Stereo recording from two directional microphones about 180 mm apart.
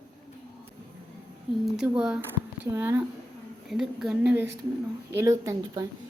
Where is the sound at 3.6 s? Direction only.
Centre (ahead or behind).